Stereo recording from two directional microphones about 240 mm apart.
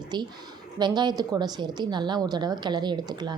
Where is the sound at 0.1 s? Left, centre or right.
Centre.